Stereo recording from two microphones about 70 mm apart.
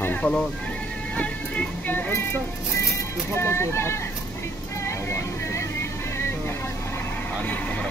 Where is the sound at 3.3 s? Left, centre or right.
Left.